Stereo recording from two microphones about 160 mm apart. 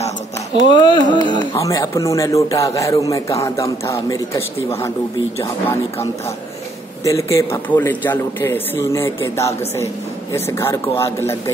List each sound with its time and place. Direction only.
0.7 s a man's voice: 30° left (ahead or behind)
7.1 s a man's voice: 20° left (ahead or behind)